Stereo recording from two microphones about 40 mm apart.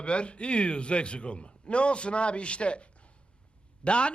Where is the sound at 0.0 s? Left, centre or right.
Left.